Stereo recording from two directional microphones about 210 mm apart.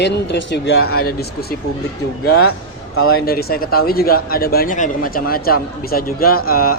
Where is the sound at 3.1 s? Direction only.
45° left (ahead or behind).